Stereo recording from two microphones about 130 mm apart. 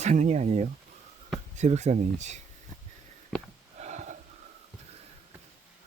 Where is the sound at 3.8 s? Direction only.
65° right (ahead or behind).